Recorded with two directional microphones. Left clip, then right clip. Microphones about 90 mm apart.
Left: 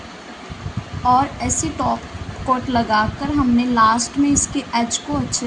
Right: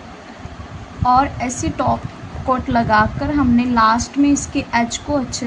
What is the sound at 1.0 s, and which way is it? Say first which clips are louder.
A woman's voice: right 1 dB; 35° right (ahead or behind).